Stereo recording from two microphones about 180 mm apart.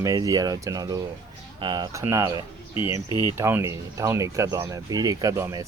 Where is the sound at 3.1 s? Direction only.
25° left (ahead or behind).